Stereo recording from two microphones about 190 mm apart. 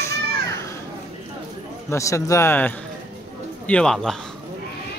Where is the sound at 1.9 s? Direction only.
15° left (ahead or behind).